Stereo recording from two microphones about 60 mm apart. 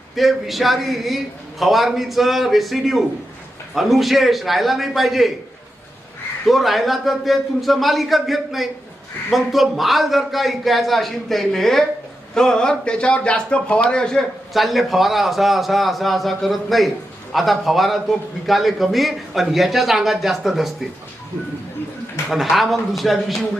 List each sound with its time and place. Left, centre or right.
0.2 s a man's voice: centre
6.4 s a man's voice: centre
14.5 s a man's voice: centre
22.3 s a man's voice: centre